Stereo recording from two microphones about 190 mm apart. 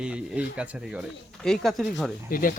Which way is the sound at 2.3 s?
45° left (ahead or behind).